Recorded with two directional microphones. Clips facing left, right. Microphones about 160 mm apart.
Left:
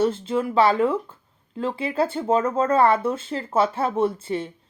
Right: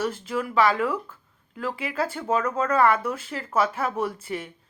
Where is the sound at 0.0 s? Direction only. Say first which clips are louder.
Left 6 dB; 25° left (ahead or behind).